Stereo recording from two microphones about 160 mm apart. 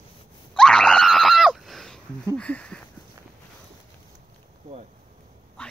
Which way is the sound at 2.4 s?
10° left (ahead or behind).